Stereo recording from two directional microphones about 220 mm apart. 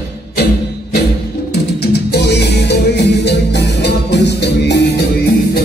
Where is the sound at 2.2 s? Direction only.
50° left (ahead or behind).